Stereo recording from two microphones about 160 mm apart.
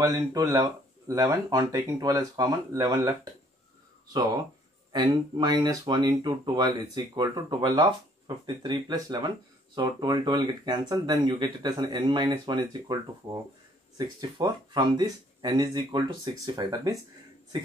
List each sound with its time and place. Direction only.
0.0 s speech: 20° right (ahead or behind)
4.9 s speech: 25° right (ahead or behind)